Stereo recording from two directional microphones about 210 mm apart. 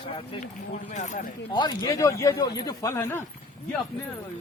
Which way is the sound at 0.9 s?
35° left (ahead or behind).